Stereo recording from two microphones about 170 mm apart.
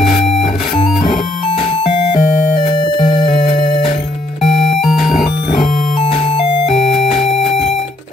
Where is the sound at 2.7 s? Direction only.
25° left (ahead or behind).